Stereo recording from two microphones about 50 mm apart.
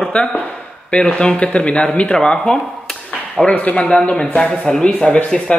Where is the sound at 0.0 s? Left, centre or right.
Centre.